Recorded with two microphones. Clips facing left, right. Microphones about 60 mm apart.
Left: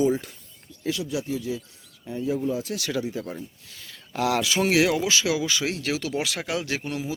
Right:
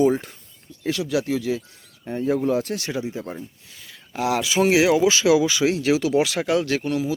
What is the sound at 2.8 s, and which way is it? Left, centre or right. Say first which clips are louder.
Speech: right 1 dB; right.